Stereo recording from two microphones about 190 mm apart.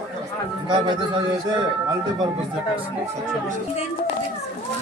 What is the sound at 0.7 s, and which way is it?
Speech, 25° right (ahead or behind).